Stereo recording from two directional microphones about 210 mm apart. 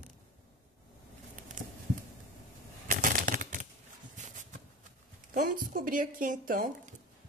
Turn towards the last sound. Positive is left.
turn(degrees=-40)  # may be behind; listen again after turning